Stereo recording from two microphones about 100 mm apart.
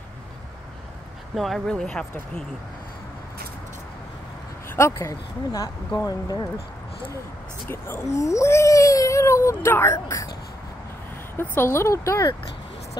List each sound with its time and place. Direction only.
1.3 s speech: centre (ahead or behind)
4.6 s speech: 30° left (ahead or behind)
7.6 s speech: 25° left (ahead or behind)
11.3 s speech: 25° left (ahead or behind)